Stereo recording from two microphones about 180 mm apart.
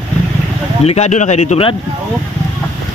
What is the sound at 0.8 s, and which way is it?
Speech, 40° left (ahead or behind).